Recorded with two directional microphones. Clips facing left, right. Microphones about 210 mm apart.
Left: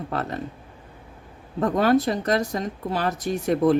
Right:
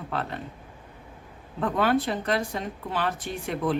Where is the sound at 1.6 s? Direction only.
40° left (ahead or behind).